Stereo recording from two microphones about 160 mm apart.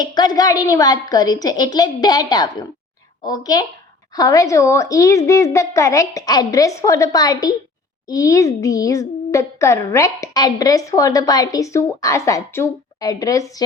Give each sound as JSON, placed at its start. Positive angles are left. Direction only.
{"t": 0.0, "sound": "speech", "side_deg": 25}